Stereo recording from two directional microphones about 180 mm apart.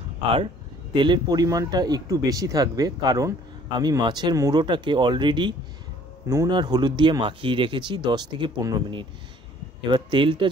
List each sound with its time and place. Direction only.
0.9 s speech: 25° right (ahead or behind)